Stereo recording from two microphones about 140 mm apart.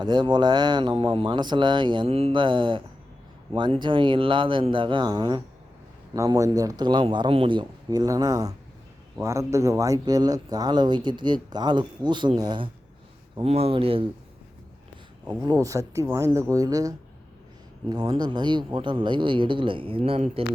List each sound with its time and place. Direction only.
0.0 s speech: 30° right (ahead or behind)
13.4 s speech: 45° right (ahead or behind)
15.4 s speech: 25° right (ahead or behind); by 20.4 s 50° right (ahead or behind)